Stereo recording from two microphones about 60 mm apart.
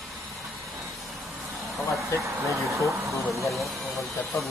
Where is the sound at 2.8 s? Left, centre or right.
Right.